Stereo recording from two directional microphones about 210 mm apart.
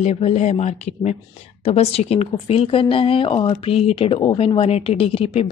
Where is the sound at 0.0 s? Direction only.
30° left (ahead or behind).